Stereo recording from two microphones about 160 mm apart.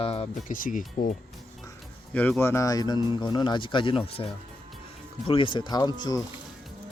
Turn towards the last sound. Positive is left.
turn(degrees=25)  # may be behind; listen again after turning